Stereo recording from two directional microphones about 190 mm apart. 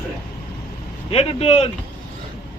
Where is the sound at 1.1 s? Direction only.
30° left (ahead or behind).